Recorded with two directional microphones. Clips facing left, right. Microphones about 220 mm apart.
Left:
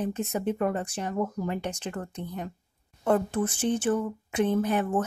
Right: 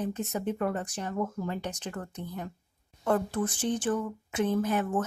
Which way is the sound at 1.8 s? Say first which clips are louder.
Left 3 dB; 25° left (ahead or behind).